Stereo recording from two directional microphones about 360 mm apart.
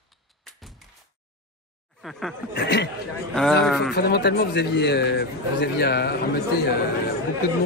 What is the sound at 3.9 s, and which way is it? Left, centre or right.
A man's voice, left.